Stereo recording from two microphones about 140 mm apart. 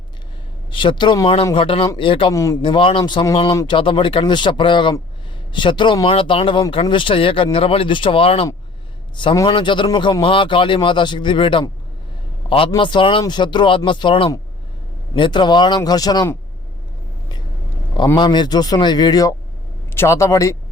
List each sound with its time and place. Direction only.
0.7 s speech: 35° left (ahead or behind)
2.3 s speech: 20° left (ahead or behind)
2.6 s speech: 35° left (ahead or behind)
9.1 s speech: 30° left (ahead or behind)
18.2 s speech: 30° left (ahead or behind)